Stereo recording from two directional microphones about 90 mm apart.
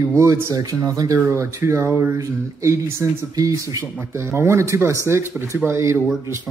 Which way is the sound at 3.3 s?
40° right (ahead or behind).